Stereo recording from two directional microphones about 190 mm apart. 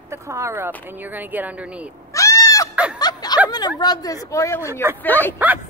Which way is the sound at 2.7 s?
5° right (ahead or behind).